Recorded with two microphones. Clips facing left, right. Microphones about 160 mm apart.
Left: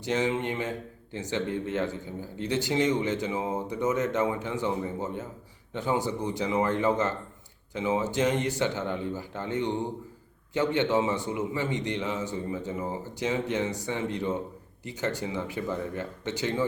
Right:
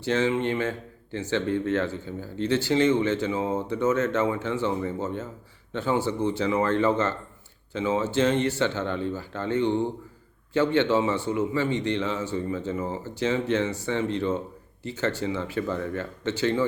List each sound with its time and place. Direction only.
0.0 s a man's voice: 15° left (ahead or behind)